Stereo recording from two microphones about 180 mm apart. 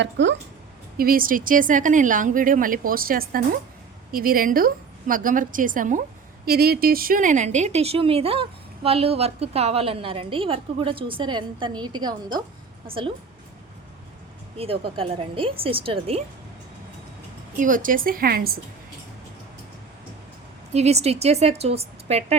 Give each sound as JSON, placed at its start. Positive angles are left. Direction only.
{"t": 0.0, "sound": "speech", "side_deg": -80}
{"t": 0.9, "sound": "speech", "side_deg": -55}
{"t": 6.4, "sound": "speech", "side_deg": -55}
{"t": 14.6, "sound": "speech", "side_deg": -30}
{"t": 17.6, "sound": "speech", "side_deg": -50}
{"t": 20.7, "sound": "speech", "side_deg": -35}